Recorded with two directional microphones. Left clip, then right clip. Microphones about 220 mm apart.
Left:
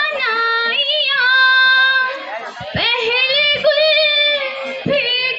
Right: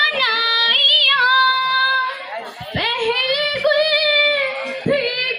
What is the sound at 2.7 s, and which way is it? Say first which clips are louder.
Female singing: left 3 dB; 40° left (ahead or behind).